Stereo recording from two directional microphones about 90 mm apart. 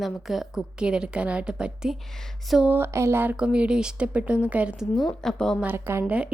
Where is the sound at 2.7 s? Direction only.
25° right (ahead or behind).